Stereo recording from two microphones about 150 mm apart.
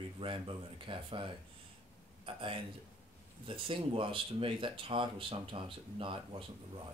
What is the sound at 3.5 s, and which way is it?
Speech, 35° right (ahead or behind).